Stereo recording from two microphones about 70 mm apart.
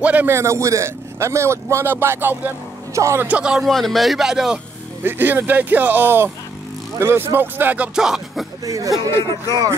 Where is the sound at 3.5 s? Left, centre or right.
Centre.